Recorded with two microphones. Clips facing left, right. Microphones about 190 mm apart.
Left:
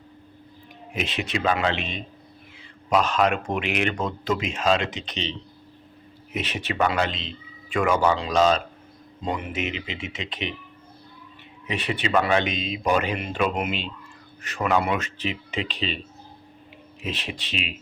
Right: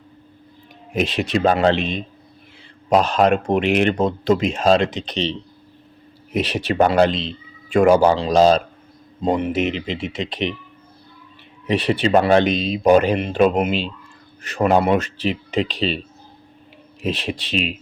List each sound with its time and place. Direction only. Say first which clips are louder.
0.9 s speech: right 8 dB; 35° right (ahead or behind)
6.3 s speech: right 9 dB; 35° right (ahead or behind)
11.7 s speech: right 7 dB; 35° right (ahead or behind)
17.0 s speech: right 8 dB; 35° right (ahead or behind)